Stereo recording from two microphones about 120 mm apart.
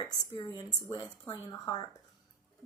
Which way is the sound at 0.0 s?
35° left (ahead or behind).